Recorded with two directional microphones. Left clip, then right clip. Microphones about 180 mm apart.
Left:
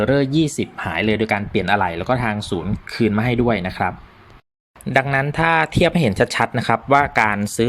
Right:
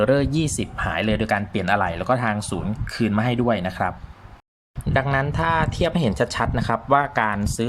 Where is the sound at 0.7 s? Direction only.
15° left (ahead or behind).